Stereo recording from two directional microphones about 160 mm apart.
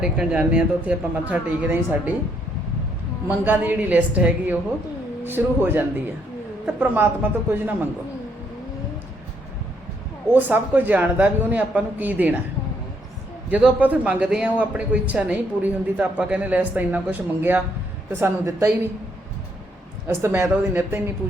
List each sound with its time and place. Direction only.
0.0 s speech: 5° right (ahead or behind)
3.2 s speech: 10° right (ahead or behind)
10.3 s speech: 10° right (ahead or behind)
13.5 s speech: 10° right (ahead or behind)
20.1 s speech: 15° right (ahead or behind)